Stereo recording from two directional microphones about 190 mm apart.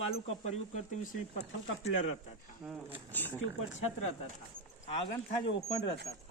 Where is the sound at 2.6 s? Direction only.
5° right (ahead or behind).